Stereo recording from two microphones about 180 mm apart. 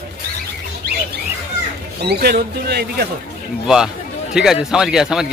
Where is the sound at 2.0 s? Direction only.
60° right (ahead or behind).